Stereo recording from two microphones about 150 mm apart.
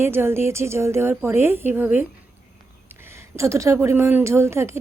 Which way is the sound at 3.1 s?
20° right (ahead or behind).